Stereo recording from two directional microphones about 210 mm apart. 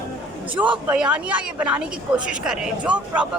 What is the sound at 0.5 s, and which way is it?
Speech, 5° right (ahead or behind).